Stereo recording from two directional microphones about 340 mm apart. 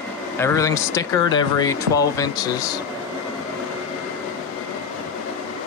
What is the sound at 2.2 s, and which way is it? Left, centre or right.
Speech, centre.